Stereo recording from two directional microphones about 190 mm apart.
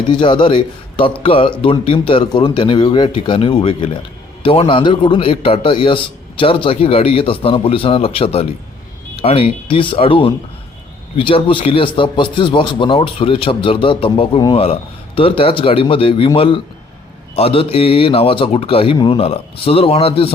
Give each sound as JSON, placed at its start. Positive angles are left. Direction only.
{"t": 0.1, "sound": "a man's voice", "side_deg": 25}